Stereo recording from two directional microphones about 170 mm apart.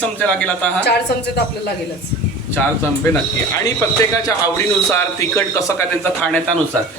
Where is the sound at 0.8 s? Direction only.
75° left (ahead or behind).